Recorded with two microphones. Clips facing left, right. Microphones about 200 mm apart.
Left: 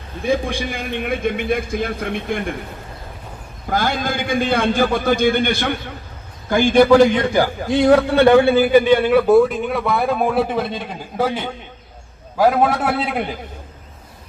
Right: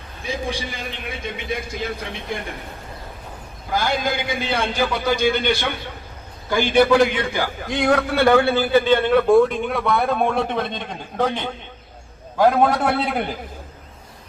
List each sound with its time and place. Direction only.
0.3 s a man's voice: 55° left (ahead or behind)
3.7 s a man's voice: 50° left (ahead or behind); by 8.0 s 30° left (ahead or behind)
8.1 s a man's voice: 15° left (ahead or behind); by 13.4 s centre (ahead or behind)